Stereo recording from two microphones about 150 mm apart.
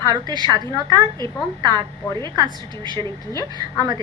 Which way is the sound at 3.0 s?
25° left (ahead or behind).